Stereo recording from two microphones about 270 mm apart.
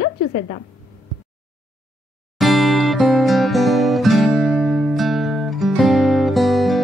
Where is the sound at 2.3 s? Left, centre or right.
Centre.